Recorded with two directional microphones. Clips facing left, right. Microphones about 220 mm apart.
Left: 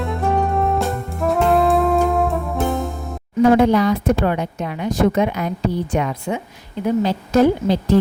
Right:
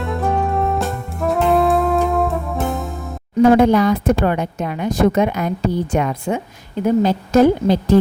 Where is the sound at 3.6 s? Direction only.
50° right (ahead or behind).